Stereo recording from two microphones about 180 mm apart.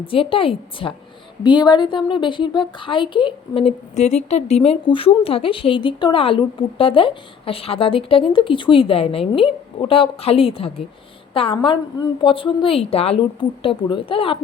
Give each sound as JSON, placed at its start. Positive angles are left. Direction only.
{"t": 0.0, "sound": "a woman's voice", "side_deg": 30}